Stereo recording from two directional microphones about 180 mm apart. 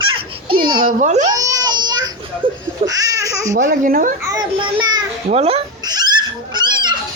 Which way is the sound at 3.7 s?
50° right (ahead or behind).